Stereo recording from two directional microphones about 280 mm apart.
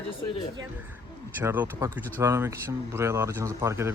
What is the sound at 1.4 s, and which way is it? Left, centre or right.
Speech, centre.